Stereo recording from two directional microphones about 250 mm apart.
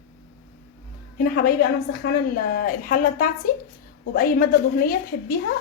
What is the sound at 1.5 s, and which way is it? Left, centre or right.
A woman's voice, left.